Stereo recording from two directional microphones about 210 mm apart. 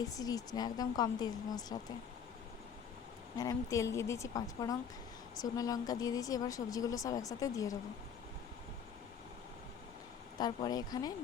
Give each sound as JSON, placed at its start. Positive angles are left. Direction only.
{"t": 0.0, "sound": "speech", "side_deg": 15}
{"t": 3.3, "sound": "speech", "side_deg": 15}
{"t": 10.3, "sound": "speech", "side_deg": 20}